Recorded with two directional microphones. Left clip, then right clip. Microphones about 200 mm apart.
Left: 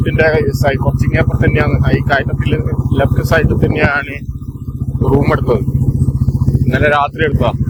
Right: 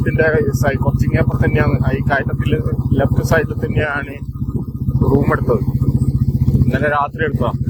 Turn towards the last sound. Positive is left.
turn(degrees=20)  # may be behind; listen again after turning